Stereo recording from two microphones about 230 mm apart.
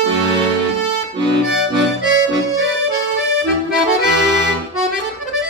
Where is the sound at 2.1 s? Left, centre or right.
Right.